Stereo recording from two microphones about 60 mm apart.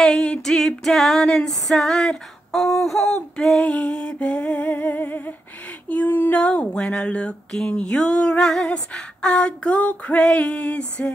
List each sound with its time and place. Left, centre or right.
0.0 s female singing: centre; by 6.4 s left
6.4 s female singing: centre